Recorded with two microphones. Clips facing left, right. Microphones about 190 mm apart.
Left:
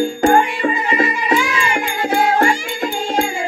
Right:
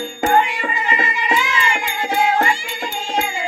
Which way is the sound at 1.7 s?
50° left (ahead or behind).